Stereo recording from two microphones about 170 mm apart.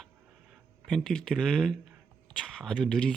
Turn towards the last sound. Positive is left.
turn(degrees=5)  # may be behind; listen again after turning